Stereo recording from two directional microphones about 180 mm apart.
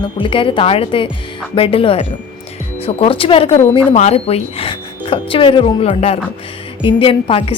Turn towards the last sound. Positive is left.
turn(degrees=30)  # may be behind; listen again after turning